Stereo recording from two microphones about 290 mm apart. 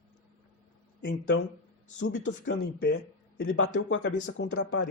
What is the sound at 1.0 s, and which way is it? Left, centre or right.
Speech, left.